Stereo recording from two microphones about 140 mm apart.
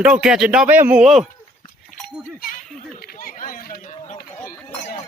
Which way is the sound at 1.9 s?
70° left (ahead or behind).